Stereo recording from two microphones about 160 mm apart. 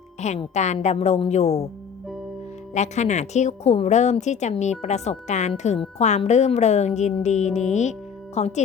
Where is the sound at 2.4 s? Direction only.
45° left (ahead or behind).